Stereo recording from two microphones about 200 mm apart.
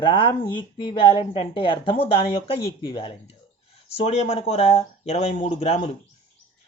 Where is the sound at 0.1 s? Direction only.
25° left (ahead or behind).